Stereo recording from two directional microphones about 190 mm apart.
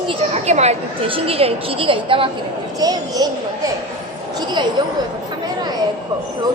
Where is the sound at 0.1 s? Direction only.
35° right (ahead or behind); by 3.2 s 20° right (ahead or behind).